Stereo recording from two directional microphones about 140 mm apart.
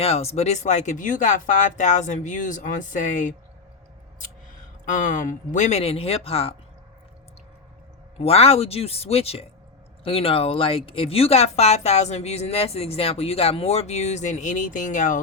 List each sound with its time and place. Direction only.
0.0 s speech: 45° left (ahead or behind); by 3.3 s 65° left (ahead or behind)
4.9 s speech: 65° left (ahead or behind); by 6.5 s 45° left (ahead or behind)
8.2 s speech: 45° left (ahead or behind); by 15.2 s 65° left (ahead or behind)